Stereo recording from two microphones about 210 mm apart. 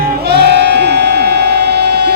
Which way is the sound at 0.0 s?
50° right (ahead or behind).